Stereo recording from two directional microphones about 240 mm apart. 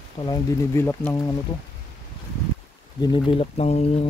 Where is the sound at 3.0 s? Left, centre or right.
Left.